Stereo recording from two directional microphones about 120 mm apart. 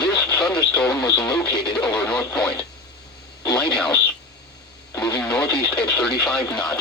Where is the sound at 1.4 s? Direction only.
40° left (ahead or behind).